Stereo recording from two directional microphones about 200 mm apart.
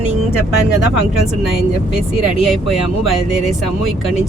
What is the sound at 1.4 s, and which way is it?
Speech, centre (ahead or behind).